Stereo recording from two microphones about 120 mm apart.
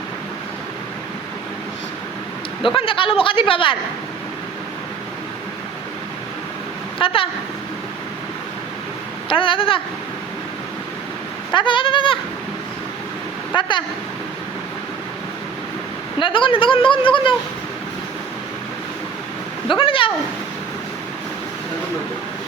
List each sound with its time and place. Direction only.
2.7 s speech: 45° left (ahead or behind)
7.0 s speech: 50° left (ahead or behind)
9.3 s speech: 45° left (ahead or behind)
11.5 s speech: 45° left (ahead or behind)
13.5 s speech: 40° left (ahead or behind)
16.1 s speech: 45° left (ahead or behind)
19.6 s speech: 45° left (ahead or behind)